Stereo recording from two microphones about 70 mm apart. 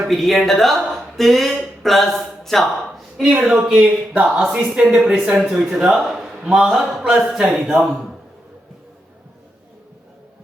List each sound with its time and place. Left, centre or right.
0.1 s speech: centre
3.4 s a man's voice: centre